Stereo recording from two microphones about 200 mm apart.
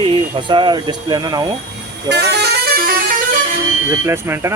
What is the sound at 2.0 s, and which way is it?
Bus, 55° right (ahead or behind).